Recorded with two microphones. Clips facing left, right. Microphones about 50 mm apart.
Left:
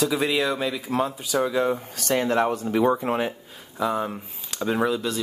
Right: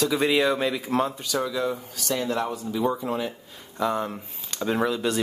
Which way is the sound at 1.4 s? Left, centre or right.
Left.